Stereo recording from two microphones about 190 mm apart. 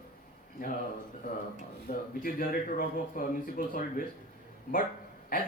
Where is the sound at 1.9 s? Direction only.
50° left (ahead or behind).